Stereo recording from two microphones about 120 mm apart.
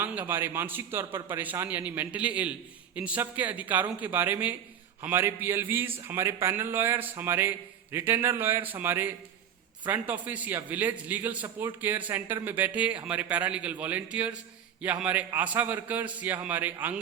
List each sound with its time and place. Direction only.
0.0 s a man's voice: 15° right (ahead or behind)